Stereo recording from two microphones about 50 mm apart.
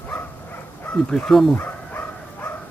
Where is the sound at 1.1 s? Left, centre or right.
Centre.